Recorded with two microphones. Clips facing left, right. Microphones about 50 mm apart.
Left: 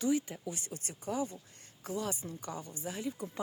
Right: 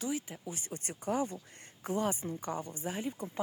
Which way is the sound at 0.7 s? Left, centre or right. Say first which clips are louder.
Right 6 dB; right.